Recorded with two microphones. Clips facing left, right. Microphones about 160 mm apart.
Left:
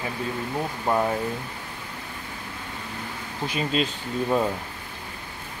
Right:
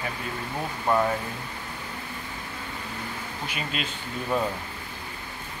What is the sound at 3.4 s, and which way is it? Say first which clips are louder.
Speech: left 8 dB; 35° left (ahead or behind).